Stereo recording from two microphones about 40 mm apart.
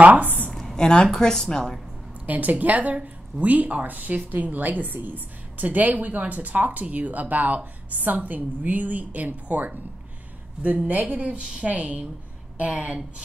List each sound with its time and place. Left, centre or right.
0.0 s speech: right
0.5 s a sound: centre
0.7 s speech: centre
2.2 s a woman's voice: right